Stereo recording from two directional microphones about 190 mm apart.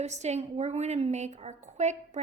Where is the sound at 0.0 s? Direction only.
35° right (ahead or behind).